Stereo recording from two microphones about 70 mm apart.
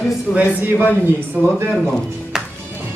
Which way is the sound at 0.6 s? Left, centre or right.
Right.